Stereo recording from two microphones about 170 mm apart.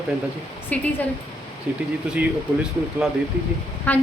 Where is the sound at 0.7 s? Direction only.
10° left (ahead or behind).